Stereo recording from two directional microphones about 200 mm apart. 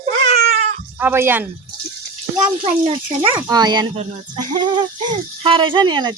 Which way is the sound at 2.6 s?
30° right (ahead or behind).